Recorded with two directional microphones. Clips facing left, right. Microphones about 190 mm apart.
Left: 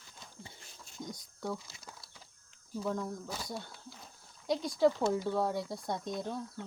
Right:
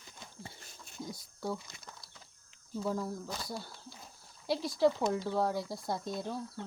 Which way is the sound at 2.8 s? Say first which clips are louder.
Right 1 dB; 5° right (ahead or behind).